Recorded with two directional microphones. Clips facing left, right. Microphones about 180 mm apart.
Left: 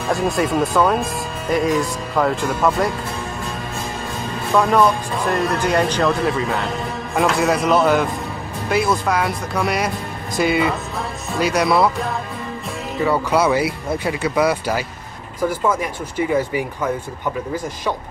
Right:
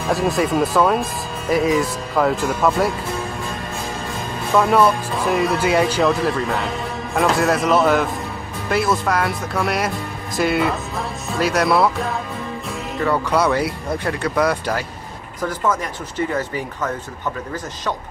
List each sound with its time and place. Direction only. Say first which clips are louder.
0.1 s speech: even; centre (ahead or behind)
4.6 s speech: even; 5° right (ahead or behind)